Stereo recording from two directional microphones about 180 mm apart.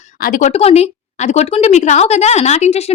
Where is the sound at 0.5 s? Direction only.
35° left (ahead or behind).